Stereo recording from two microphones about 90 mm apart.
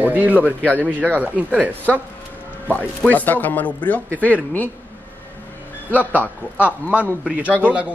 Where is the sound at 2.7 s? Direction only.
20° left (ahead or behind).